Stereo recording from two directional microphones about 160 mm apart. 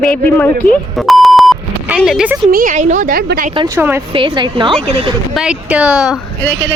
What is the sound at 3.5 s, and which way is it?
Speech, 25° right (ahead or behind).